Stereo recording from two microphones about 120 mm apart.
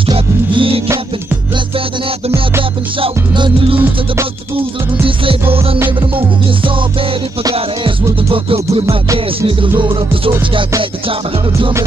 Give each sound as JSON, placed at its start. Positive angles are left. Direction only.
{"t": 0.0, "sound": "music", "side_deg": -45}
{"t": 3.0, "sound": "music", "side_deg": -45}
{"t": 5.0, "sound": "music", "side_deg": -45}
{"t": 9.8, "sound": "music", "side_deg": -50}